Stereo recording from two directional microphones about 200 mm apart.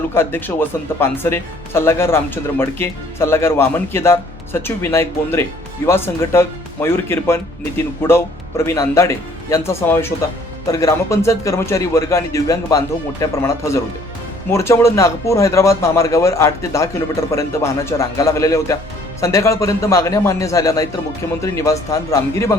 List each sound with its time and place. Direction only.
0.1 s speech: 10° left (ahead or behind)